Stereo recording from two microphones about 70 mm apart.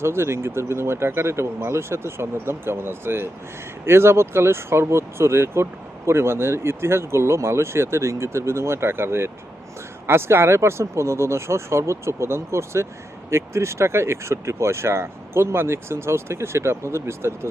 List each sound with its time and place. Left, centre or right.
0.0 s speech: right